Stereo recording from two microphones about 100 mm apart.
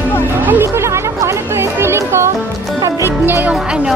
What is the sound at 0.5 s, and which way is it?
Music, 25° right (ahead or behind).